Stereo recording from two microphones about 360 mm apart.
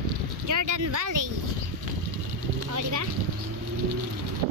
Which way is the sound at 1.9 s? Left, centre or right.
Right.